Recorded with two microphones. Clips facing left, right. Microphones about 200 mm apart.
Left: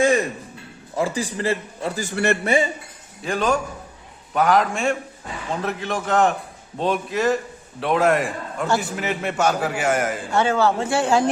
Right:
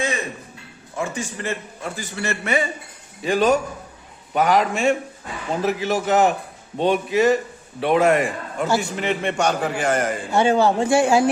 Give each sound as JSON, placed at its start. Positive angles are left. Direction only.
{"t": 0.9, "sound": "a man's voice", "side_deg": 35}
{"t": 2.0, "sound": "a man's voice", "side_deg": 55}
{"t": 2.4, "sound": "a man's voice", "side_deg": 30}
{"t": 3.2, "sound": "a man's voice", "side_deg": 0}
{"t": 10.3, "sound": "speech", "side_deg": -15}